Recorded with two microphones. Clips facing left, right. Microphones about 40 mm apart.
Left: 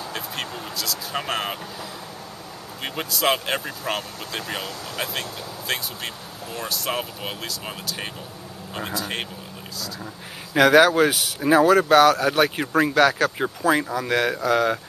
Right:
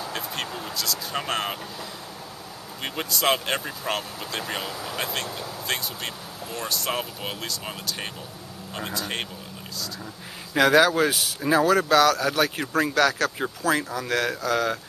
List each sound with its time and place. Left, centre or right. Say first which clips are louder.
0.0 s vehicle: even; centre
2.8 s speech: left 2 dB; centre
10.9 s speech: left 3 dB; centre